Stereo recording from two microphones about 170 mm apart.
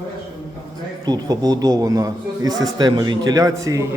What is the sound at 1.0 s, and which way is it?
A man's voice, 25° right (ahead or behind).